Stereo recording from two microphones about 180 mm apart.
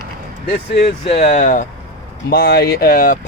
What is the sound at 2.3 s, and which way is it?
Speech, 60° left (ahead or behind).